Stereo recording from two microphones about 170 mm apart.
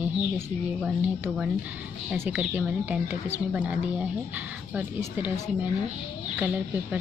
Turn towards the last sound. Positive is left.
turn(degrees=-10)  # may be behind; listen again after turning